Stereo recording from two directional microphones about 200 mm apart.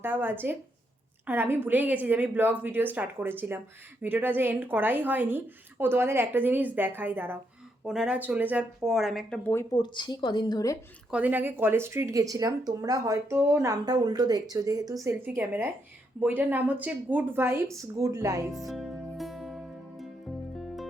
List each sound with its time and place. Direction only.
0.0 s a woman's voice: 10° right (ahead or behind); by 9.6 s 10° left (ahead or behind)
9.7 s a woman's voice: 20° left (ahead or behind)
11.1 s a woman's voice: 10° right (ahead or behind)
18.5 s music: centre (ahead or behind)